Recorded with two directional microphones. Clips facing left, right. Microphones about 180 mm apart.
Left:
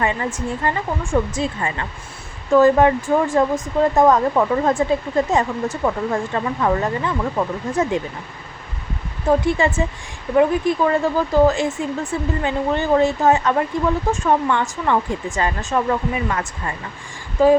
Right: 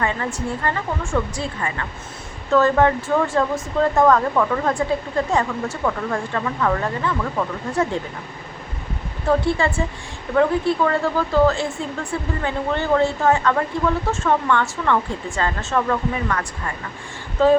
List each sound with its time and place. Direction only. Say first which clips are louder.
0.0 s speech: left 2 dB; 15° left (ahead or behind)
9.4 s speech: left 2 dB; 20° left (ahead or behind)
17.4 s speech: left 2 dB; 10° left (ahead or behind)